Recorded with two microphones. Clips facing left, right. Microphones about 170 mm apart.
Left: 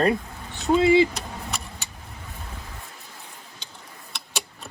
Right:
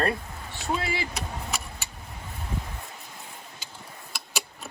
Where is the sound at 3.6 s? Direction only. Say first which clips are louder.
Right 1 dB; 5° right (ahead or behind).